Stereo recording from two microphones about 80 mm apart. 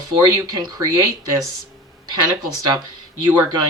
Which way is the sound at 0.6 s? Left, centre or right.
Right.